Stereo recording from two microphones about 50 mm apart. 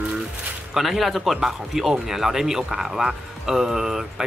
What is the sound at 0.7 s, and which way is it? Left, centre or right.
Speech, centre.